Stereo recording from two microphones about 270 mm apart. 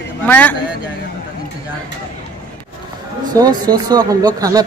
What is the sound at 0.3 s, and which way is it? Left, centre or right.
Speech, centre.